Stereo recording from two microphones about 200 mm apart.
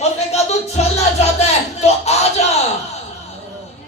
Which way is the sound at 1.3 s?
30° left (ahead or behind).